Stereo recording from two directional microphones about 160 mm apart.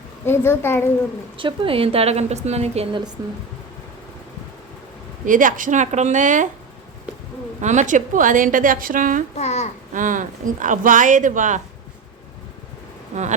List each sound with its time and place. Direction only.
0.3 s a woman's voice: 15° left (ahead or behind)
1.4 s a woman's voice: 35° right (ahead or behind)
3.2 s speech: 20° right (ahead or behind)
5.2 s speech: 55° right (ahead or behind)
7.6 s speech: 50° right (ahead or behind)
9.3 s a child's voice: 45° left (ahead or behind)
9.9 s speech: 55° right (ahead or behind)